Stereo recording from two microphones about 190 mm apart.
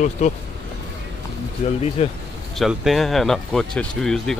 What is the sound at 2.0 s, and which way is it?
Speech, 35° left (ahead or behind).